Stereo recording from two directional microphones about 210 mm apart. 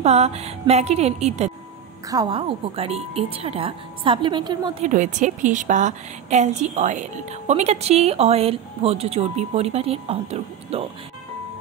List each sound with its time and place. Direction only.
0.0 s a woman's voice: 30° right (ahead or behind)
2.0 s a woman's voice: 20° right (ahead or behind)
4.8 s a woman's voice: 35° right (ahead or behind)